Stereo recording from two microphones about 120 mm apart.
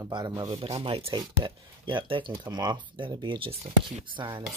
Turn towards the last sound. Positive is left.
turn(degrees=-40)  # may be behind; listen again after turning